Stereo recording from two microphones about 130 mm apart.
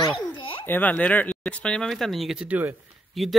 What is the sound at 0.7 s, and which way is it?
Speech, 10° left (ahead or behind).